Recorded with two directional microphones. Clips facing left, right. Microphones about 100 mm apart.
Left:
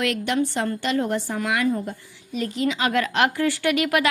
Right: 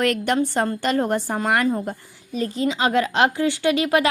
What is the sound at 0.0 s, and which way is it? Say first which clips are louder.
A woman's voice: right 3 dB; 45° right (ahead or behind).